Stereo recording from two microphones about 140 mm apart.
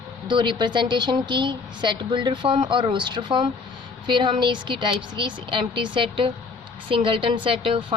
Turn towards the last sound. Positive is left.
turn(degrees=-40)  # may be behind; listen again after turning